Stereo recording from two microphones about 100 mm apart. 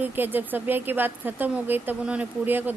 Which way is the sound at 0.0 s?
20° right (ahead or behind).